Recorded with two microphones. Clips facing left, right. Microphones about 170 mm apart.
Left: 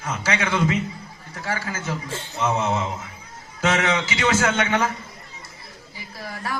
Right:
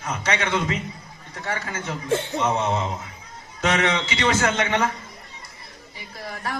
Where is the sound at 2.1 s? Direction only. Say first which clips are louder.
Right 10 dB; 60° right (ahead or behind).